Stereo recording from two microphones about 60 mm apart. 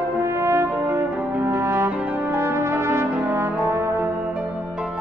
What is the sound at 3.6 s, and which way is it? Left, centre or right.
Music, right.